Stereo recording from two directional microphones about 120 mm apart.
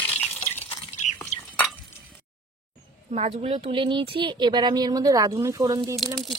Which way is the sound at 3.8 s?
45° right (ahead or behind).